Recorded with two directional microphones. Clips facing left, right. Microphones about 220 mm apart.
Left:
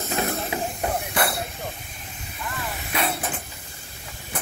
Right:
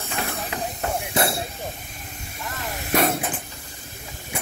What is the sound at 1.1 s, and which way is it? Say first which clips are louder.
Hiss: right 5 dB; 25° right (ahead or behind).